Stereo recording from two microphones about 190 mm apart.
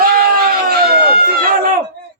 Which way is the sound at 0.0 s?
50° right (ahead or behind).